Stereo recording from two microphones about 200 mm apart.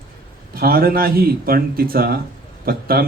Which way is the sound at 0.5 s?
50° right (ahead or behind).